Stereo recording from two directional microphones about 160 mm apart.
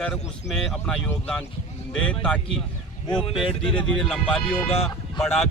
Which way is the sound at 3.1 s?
30° left (ahead or behind).